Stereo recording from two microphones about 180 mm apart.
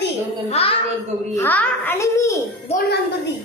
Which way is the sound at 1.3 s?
10° left (ahead or behind).